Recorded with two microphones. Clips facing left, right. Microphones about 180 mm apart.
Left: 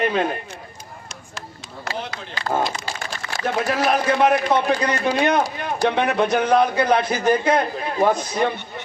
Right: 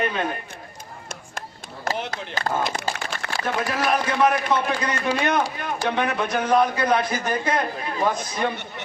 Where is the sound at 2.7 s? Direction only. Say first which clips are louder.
Right 2 dB; 60° right (ahead or behind).